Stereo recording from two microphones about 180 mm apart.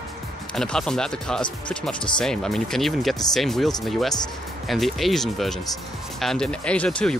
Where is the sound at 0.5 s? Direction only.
5° left (ahead or behind).